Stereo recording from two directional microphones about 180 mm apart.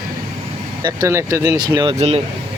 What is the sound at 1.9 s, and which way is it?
Speech, 35° right (ahead or behind).